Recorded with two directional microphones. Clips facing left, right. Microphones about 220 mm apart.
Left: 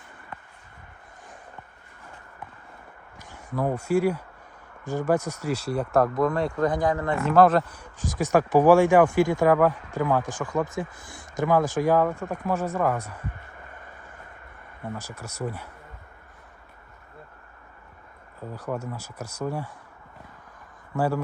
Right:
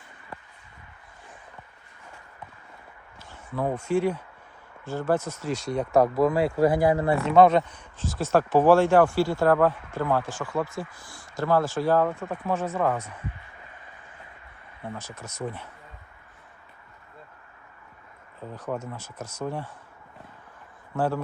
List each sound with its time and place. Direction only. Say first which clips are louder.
3.2 s speech: left 1 dB; 15° left (ahead or behind); by 7.2 s 10° right (ahead or behind)
7.3 s speech: even; centre (ahead or behind)
13.3 s a sound: left 3 dB; 50° left (ahead or behind)
14.9 s speech: left 1 dB; 10° left (ahead or behind)
18.5 s speech: left 1 dB; 10° left (ahead or behind)